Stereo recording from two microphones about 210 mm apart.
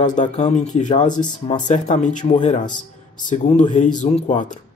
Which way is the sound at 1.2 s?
20° left (ahead or behind).